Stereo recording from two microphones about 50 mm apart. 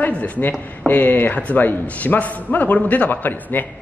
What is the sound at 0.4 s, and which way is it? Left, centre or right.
Speech, left.